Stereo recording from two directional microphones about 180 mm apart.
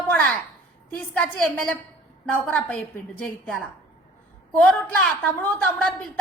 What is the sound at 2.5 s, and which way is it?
A woman's voice, 5° left (ahead or behind).